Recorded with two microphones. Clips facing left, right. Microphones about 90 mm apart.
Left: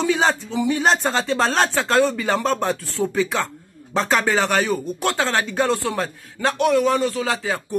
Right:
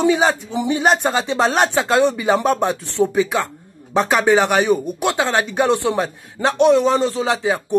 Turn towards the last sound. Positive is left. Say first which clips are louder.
# right 5 dB
turn(degrees=-20)  # may be behind; listen again after turning